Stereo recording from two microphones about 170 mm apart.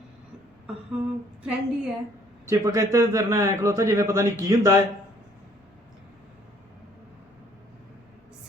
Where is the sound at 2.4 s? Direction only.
20° right (ahead or behind).